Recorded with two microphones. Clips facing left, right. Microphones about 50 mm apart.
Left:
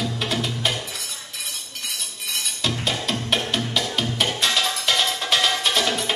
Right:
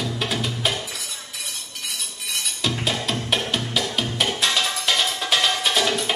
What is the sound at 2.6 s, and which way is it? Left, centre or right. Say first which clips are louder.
Music: right 1 dB; centre.